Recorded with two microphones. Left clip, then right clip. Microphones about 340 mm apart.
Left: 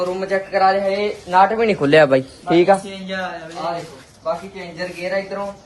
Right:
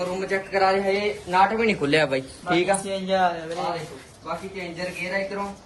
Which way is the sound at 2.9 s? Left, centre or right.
Centre.